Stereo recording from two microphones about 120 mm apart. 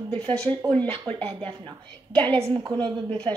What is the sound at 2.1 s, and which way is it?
Speech, 50° right (ahead or behind).